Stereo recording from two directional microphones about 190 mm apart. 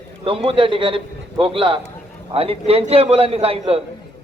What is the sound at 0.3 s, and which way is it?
A man's voice, 30° right (ahead or behind).